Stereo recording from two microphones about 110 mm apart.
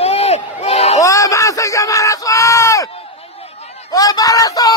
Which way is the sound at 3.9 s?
35° left (ahead or behind).